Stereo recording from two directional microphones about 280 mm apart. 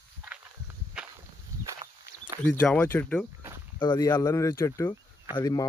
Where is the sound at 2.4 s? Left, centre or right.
Centre.